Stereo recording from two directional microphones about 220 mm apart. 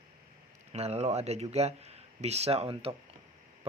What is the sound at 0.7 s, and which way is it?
Speech, 30° right (ahead or behind).